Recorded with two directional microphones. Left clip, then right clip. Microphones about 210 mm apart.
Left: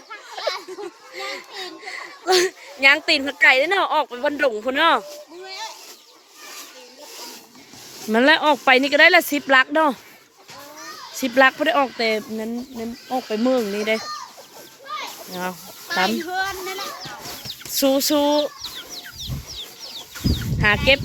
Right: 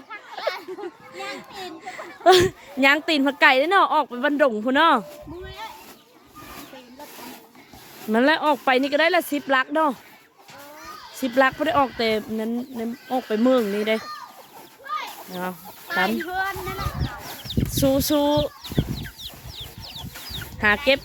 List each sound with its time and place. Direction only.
0.1 s children playing: 20° right (ahead or behind)
1.1 s speech: 5° right (ahead or behind)
5.5 s a sound: 30° left (ahead or behind)
8.1 s speech: 5° right (ahead or behind)
11.2 s speech: 5° right (ahead or behind); by 13.5 s 30° right (ahead or behind)
13.7 s speech: 15° right (ahead or behind)
14.8 s children playing: 30° right (ahead or behind)
15.9 s a child's voice: 5° left (ahead or behind)
17.7 s speech: 5° right (ahead or behind)
18.6 s chicken: 35° right (ahead or behind)
20.6 s speech: 5° right (ahead or behind)